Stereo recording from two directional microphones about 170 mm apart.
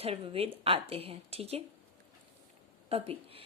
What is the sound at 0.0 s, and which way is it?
Speech, 35° right (ahead or behind).